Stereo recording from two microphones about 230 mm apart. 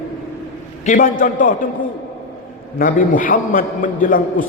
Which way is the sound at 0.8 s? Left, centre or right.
Left.